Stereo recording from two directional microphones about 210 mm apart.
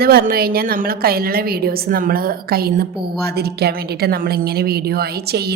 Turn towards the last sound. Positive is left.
turn(degrees=-50)  # may be behind; listen again after turning